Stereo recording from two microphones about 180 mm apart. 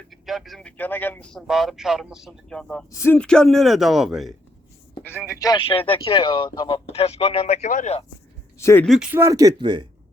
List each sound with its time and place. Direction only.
0.1 s speech: centre (ahead or behind)
5.4 s speech: 25° left (ahead or behind); by 8.0 s 40° left (ahead or behind)
8.5 s speech: 15° left (ahead or behind)
8.9 s speech: 5° right (ahead or behind); by 9.8 s 25° right (ahead or behind)